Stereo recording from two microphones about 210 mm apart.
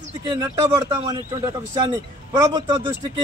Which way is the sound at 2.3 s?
20° right (ahead or behind).